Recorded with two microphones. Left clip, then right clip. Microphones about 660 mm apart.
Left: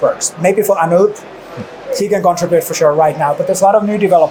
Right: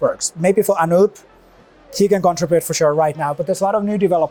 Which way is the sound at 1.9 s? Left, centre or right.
Right.